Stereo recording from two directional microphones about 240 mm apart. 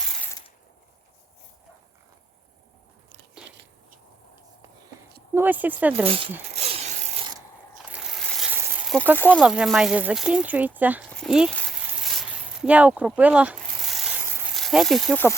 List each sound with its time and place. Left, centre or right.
5.3 s speech: centre
6.1 s speech: right
6.5 s mechanisms: right
7.9 s a sound: centre
9.1 s speech: centre
9.4 s speech: centre
10.8 s a sound: centre
14.5 s speech: centre